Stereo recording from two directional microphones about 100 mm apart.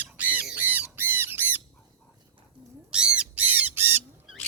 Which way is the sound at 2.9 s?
10° right (ahead or behind).